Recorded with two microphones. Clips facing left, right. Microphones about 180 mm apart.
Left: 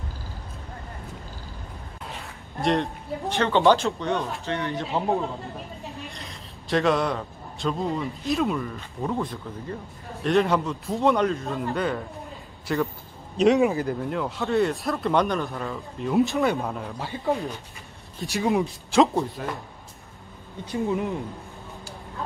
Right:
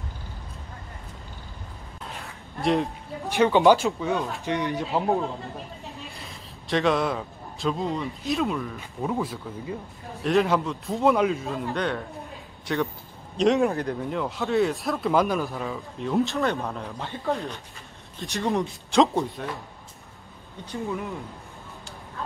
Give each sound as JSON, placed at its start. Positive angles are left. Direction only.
{"t": 2.0, "sound": "a sound", "side_deg": 0}
{"t": 3.3, "sound": "speech", "side_deg": -15}
{"t": 3.8, "sound": "speech", "side_deg": 0}
{"t": 4.5, "sound": "speech", "side_deg": -15}
{"t": 4.8, "sound": "a man's voice", "side_deg": 0}
{"t": 18.3, "sound": "speech", "side_deg": 5}
{"t": 20.7, "sound": "speech", "side_deg": 20}